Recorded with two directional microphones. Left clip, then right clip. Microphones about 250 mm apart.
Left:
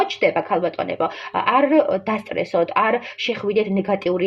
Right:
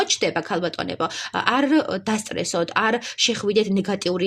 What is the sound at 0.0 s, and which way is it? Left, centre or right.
Speech, right.